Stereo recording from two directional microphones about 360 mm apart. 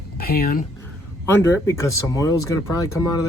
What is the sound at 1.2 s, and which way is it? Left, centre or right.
Speech, centre.